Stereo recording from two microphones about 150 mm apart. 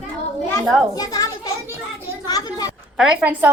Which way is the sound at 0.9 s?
25° left (ahead or behind).